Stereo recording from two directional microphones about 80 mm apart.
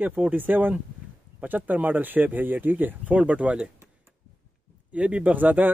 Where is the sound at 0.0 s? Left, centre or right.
Centre.